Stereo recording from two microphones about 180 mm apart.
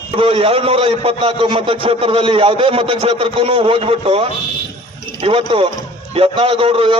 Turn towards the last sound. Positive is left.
turn(degrees=-30)  # may be behind; listen again after turning